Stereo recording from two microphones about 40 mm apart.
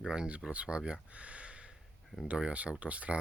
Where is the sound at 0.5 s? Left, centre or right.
Right.